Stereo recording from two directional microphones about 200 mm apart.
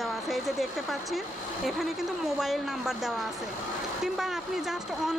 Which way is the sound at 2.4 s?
Centre (ahead or behind).